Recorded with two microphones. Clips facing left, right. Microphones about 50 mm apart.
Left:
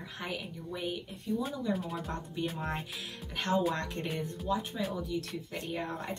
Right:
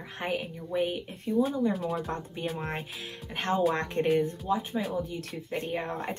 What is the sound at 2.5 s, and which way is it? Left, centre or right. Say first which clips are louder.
Speech: right 2 dB; right.